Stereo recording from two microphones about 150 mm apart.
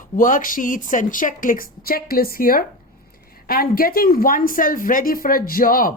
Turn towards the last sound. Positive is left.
turn(degrees=70)  # may be behind; listen again after turning